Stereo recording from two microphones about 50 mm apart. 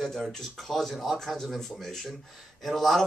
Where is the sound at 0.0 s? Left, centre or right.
Centre.